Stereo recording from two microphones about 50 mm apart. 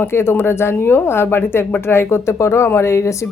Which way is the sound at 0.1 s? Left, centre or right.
Left.